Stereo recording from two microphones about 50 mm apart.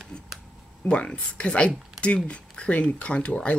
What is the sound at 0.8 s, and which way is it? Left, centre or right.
Speech, left.